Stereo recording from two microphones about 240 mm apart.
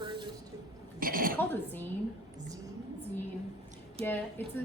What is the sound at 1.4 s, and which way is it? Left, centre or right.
Speech, centre.